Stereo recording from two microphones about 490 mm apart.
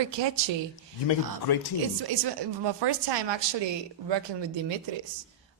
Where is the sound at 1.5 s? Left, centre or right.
Left.